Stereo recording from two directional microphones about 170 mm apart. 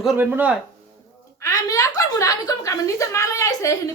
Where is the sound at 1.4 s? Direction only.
20° left (ahead or behind).